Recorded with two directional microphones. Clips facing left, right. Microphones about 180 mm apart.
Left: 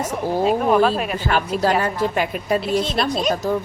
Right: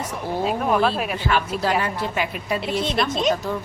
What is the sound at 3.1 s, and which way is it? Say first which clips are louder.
Speech: right 1 dB; 20° right (ahead or behind).